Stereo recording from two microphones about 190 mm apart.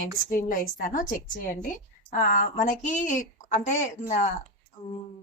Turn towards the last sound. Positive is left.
turn(degrees=40)  # may be behind; listen again after turning